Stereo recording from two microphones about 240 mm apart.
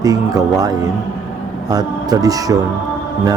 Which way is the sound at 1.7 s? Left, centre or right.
Centre.